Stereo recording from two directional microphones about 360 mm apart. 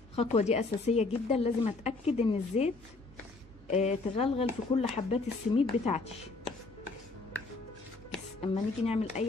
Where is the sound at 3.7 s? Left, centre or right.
Centre.